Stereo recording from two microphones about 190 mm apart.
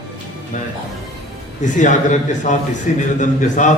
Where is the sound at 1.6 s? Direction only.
40° left (ahead or behind).